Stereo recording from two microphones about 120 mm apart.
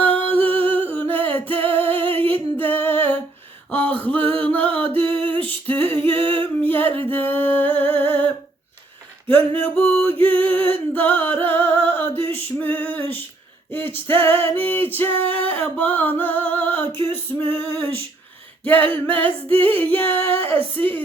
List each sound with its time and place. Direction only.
0.0 s a sound: 15° left (ahead or behind)
1.1 s music: 15° left (ahead or behind)
1.8 s singing: 50° right (ahead or behind)
2.1 s a sound: 15° left (ahead or behind)
4.2 s music: 50° right (ahead or behind)
4.4 s music: 15° left (ahead or behind)
6.1 s a sound: 15° left (ahead or behind)
6.6 s singing: 15° left (ahead or behind)
7.1 s music: 15° left (ahead or behind)
9.3 s music: 15° left (ahead or behind)
10.1 s music: 50° right (ahead or behind)
10.3 s music: 15° left (ahead or behind)